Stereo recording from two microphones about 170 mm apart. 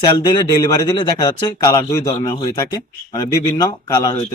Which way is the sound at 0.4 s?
25° left (ahead or behind).